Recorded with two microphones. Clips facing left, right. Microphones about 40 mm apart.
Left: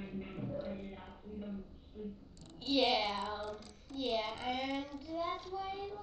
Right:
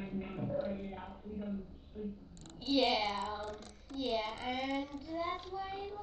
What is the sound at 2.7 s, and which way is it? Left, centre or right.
Speech, centre.